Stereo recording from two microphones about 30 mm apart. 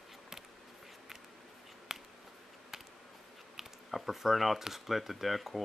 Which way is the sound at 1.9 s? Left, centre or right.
Centre.